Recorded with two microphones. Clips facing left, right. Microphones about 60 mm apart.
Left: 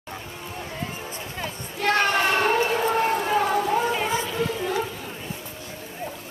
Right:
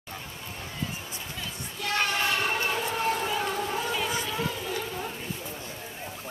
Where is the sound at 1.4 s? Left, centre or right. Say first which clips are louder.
Left 10 dB; left.